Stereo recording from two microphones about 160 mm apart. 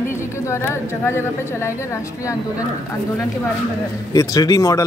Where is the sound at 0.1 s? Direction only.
15° left (ahead or behind).